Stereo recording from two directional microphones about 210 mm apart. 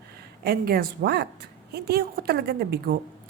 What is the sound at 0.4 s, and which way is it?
A woman's voice, 45° right (ahead or behind).